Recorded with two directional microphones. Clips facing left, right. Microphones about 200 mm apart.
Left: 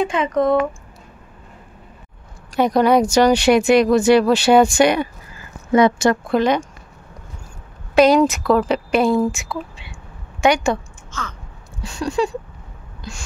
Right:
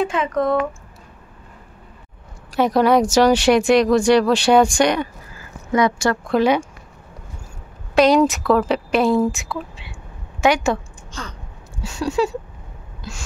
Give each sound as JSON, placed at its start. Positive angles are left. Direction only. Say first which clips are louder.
{"t": 0.0, "sound": "speech", "louder": "left 2 dB", "side_deg": 0}
{"t": 2.5, "sound": "speech", "louder": "left 1 dB", "side_deg": 0}
{"t": 5.7, "sound": "speech", "louder": "left 4 dB", "side_deg": 25}
{"t": 6.4, "sound": "speech", "louder": "right 3 dB", "side_deg": -10}
{"t": 7.9, "sound": "speech", "louder": "left 1 dB", "side_deg": 0}
{"t": 11.8, "sound": "speech", "louder": "even", "side_deg": -5}
{"t": 13.0, "sound": "a sound", "louder": "even", "side_deg": -5}